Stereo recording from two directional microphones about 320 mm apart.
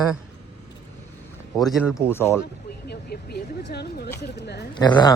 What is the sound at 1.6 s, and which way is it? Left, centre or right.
Speech, centre.